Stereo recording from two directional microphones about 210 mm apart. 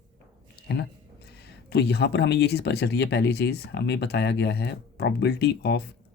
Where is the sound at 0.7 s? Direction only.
50° left (ahead or behind).